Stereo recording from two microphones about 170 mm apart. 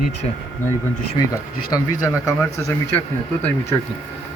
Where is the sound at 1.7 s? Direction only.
20° left (ahead or behind).